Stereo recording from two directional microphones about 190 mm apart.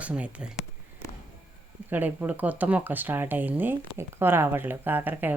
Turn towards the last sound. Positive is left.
turn(degrees=-10)  # may be behind; listen again after turning